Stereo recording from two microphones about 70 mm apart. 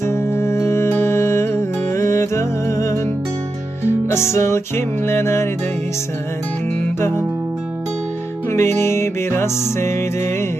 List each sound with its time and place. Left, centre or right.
0.0 s music: left
8.4 s music: left